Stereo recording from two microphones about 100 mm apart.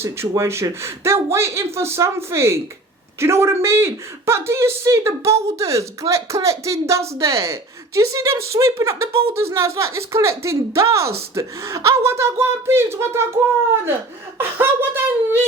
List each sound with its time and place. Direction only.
0.0 s speech: 25° right (ahead or behind)